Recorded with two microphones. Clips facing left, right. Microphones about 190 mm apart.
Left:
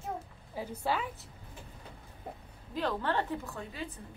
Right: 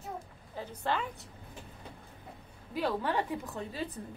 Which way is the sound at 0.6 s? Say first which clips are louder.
Left 1 dB; 10° left (ahead or behind).